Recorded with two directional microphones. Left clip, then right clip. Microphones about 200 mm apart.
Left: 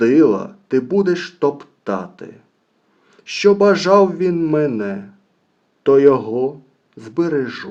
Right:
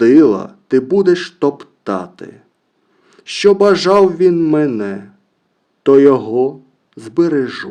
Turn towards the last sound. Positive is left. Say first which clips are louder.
# right 4 dB
turn(degrees=-35)  # may be behind; listen again after turning